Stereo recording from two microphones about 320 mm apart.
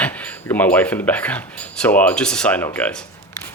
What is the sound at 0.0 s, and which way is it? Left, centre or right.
Speech, centre.